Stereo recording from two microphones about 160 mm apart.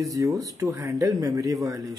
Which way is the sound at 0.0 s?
20° right (ahead or behind).